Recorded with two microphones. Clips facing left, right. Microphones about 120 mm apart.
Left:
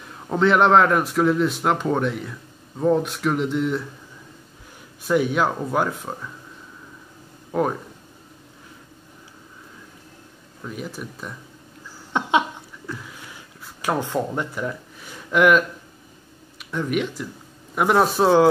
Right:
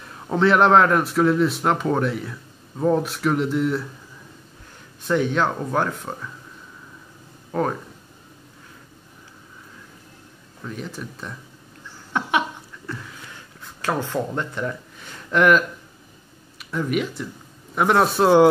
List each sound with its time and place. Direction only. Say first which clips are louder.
0.0 s a man's voice: even; centre (ahead or behind)
5.0 s speech: left 1 dB; 10° left (ahead or behind)
7.5 s speech: left 1 dB; 5° left (ahead or behind)
10.6 s speech: even; 5° left (ahead or behind)
12.1 s laughter: left 2 dB; 20° left (ahead or behind)
13.6 s a man's voice: left 1 dB; 15° left (ahead or behind)